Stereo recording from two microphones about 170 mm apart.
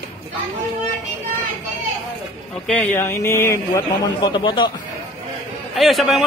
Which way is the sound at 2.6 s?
10° left (ahead or behind).